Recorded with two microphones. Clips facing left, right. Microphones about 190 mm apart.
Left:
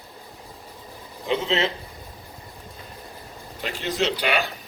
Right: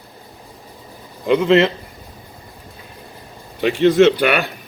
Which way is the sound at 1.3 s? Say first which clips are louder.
Right 10 dB; 65° right (ahead or behind).